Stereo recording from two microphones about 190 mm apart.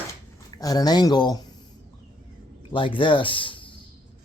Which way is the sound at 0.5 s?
20° left (ahead or behind).